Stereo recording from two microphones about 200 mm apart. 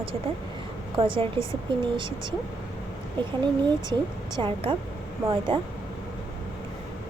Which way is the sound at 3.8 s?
20° right (ahead or behind).